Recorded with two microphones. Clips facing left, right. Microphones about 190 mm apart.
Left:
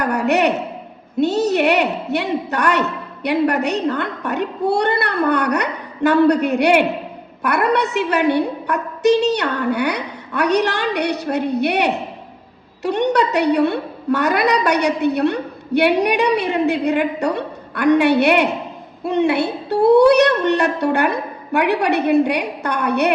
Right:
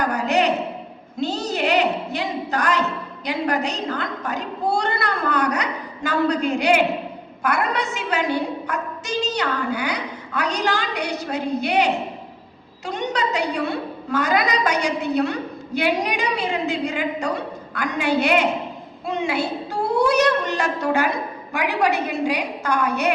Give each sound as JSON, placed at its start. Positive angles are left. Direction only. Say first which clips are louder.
{"t": 0.0, "sound": "a woman's voice", "louder": "left 3 dB", "side_deg": 65}